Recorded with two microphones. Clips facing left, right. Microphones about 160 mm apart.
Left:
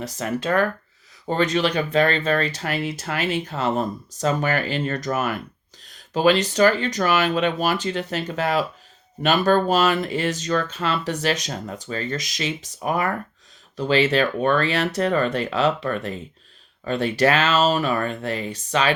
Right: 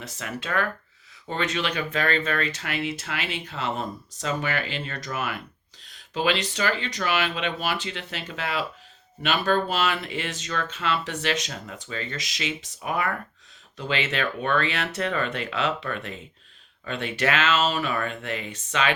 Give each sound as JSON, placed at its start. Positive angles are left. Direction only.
{"t": 0.0, "sound": "speech", "side_deg": 40}